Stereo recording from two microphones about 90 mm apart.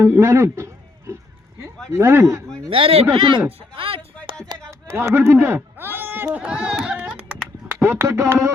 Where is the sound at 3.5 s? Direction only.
90° right.